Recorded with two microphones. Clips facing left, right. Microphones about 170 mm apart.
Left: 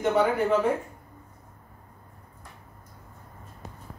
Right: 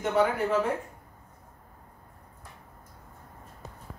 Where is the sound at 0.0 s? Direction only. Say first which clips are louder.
Left 2 dB; centre (ahead or behind).